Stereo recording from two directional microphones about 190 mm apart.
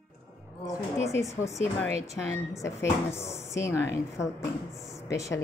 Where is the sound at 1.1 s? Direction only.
15° left (ahead or behind).